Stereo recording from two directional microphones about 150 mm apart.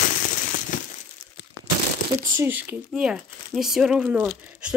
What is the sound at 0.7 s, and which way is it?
Crumpling, 60° left (ahead or behind).